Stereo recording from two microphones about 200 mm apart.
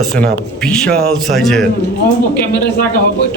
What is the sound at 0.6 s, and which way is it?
A man's voice, 5° left (ahead or behind).